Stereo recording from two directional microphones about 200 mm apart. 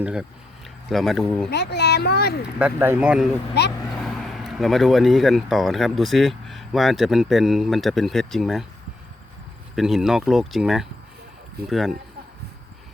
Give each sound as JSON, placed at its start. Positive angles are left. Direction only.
{"t": 0.0, "sound": "speech", "side_deg": -5}
{"t": 1.5, "sound": "speech", "side_deg": 55}
{"t": 2.6, "sound": "speech", "side_deg": -10}
{"t": 9.7, "sound": "speech", "side_deg": 0}